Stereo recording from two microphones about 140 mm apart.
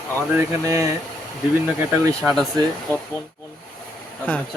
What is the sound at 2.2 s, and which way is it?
Speech, 15° right (ahead or behind).